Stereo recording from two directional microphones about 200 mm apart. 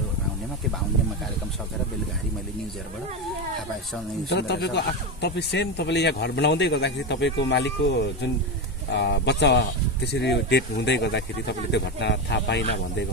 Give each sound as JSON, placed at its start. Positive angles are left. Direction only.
{"t": 4.3, "sound": "speech", "side_deg": 55}